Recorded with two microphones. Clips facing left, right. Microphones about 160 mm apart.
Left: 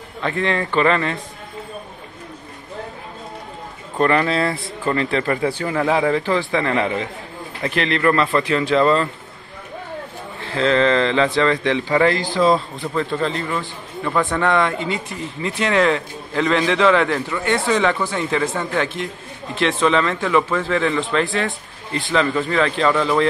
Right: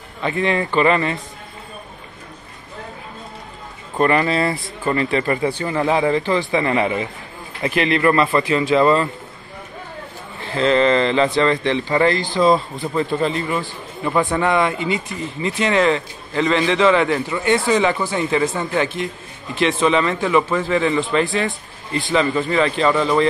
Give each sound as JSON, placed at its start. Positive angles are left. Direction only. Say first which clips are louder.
{"t": 0.2, "sound": "a man's voice", "louder": "right 1 dB", "side_deg": -5}
{"t": 4.0, "sound": "a man's voice", "louder": "right 1 dB", "side_deg": -5}
{"t": 10.4, "sound": "a man's voice", "louder": "right 1 dB", "side_deg": 0}
{"t": 12.8, "sound": "a man's voice", "louder": "right 2 dB", "side_deg": -10}